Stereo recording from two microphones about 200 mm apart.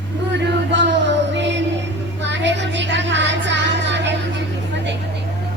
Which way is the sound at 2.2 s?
65° right (ahead or behind).